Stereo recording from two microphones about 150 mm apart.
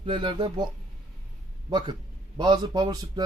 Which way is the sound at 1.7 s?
30° right (ahead or behind).